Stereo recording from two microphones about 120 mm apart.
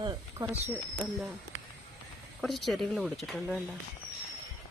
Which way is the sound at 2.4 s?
Centre (ahead or behind).